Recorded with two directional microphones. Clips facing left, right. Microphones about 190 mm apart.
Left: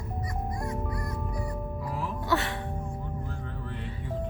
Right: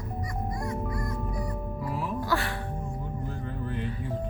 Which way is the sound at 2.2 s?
20° left (ahead or behind).